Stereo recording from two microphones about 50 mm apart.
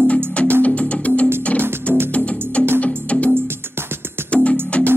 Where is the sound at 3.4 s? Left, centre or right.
Right.